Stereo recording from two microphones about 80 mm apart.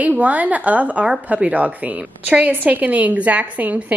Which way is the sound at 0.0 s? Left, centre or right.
Centre.